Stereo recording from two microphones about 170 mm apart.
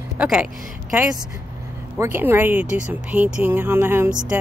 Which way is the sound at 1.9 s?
15° right (ahead or behind).